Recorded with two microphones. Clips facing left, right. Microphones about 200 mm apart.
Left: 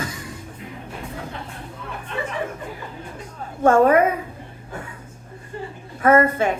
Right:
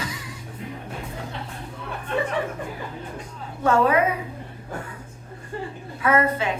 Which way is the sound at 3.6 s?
50° left (ahead or behind).